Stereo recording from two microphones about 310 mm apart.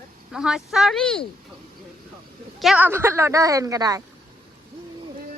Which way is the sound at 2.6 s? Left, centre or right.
Centre.